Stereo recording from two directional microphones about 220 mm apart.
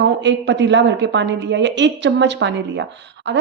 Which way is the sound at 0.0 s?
55° right (ahead or behind).